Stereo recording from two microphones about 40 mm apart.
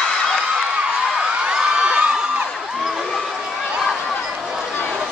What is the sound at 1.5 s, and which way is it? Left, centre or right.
Crowd, right.